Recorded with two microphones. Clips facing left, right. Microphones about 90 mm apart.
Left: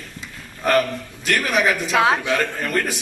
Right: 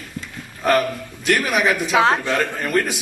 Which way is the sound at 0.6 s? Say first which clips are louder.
Right 1 dB; 5° right (ahead or behind).